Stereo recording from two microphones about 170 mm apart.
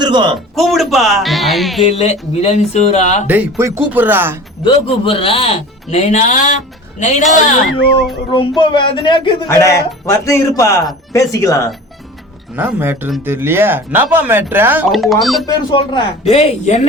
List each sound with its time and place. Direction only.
0.0 s a sound: 30° right (ahead or behind)
0.5 s speech: centre (ahead or behind)
1.9 s speech: 40° left (ahead or behind)
3.2 s speech: 10° right (ahead or behind)
4.6 s speech: 30° left (ahead or behind)
8.3 s speech: 25° left (ahead or behind)
9.5 s speech: 15° left (ahead or behind)
12.5 s speech: 10° right (ahead or behind)
14.8 s speech: centre (ahead or behind)
15.4 s speech: 25° left (ahead or behind)
16.3 s speech: 40° left (ahead or behind)